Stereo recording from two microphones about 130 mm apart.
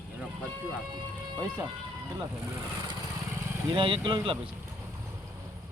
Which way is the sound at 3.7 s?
40° right (ahead or behind).